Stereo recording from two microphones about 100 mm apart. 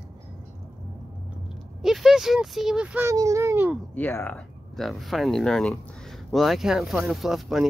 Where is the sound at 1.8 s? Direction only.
5° right (ahead or behind).